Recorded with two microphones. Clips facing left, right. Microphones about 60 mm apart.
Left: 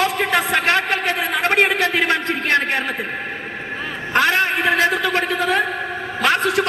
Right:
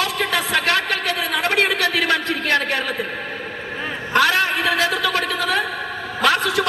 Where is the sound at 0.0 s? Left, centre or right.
Left.